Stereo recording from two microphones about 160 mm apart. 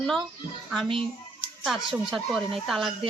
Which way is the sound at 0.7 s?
Centre (ahead or behind).